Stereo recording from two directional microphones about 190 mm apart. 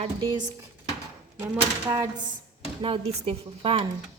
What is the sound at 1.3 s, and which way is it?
Speech, 15° right (ahead or behind).